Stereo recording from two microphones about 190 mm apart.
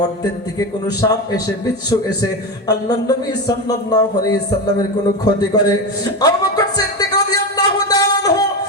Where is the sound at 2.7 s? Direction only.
20° left (ahead or behind).